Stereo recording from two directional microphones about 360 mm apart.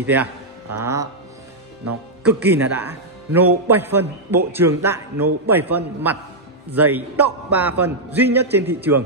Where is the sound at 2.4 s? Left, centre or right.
Centre.